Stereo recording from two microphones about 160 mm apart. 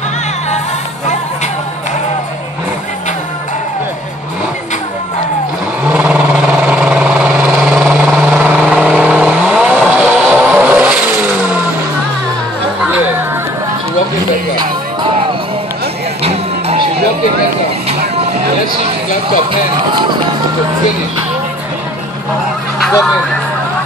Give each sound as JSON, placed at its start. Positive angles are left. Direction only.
{"t": 5.9, "sound": "vehicle", "side_deg": -10}
{"t": 16.2, "sound": "music", "side_deg": -40}